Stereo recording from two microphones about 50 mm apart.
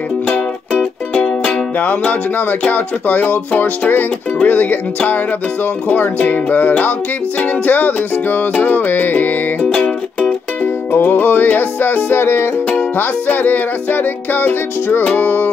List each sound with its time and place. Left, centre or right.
1.4 s music: left
9.6 s music: centre
10.6 s music: left
12.9 s music: left